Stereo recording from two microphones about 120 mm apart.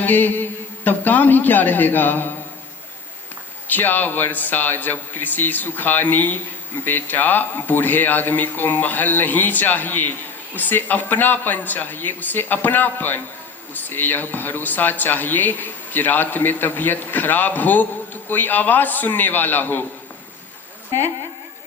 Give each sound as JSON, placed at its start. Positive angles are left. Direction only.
{"t": 0.0, "sound": "mantra", "side_deg": 15}
{"t": 0.9, "sound": "speech", "side_deg": 15}
{"t": 3.7, "sound": "speech", "side_deg": 15}